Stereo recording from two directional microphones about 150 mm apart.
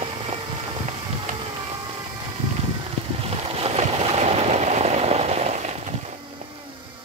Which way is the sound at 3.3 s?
40° right (ahead or behind).